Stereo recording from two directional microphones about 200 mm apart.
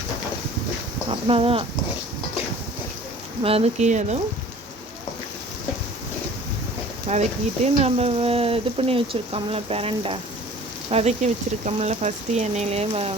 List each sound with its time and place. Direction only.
1.3 s speech: 30° right (ahead or behind)
3.4 s speech: 30° right (ahead or behind)
7.1 s speech: 35° right (ahead or behind)